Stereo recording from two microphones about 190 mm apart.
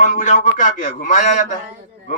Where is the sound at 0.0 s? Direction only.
40° left (ahead or behind).